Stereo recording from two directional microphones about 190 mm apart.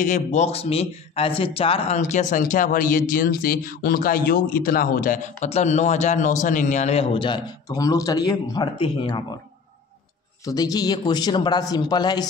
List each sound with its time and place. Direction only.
0.0 s speech: 40° left (ahead or behind)
10.4 s a man's voice: 20° left (ahead or behind)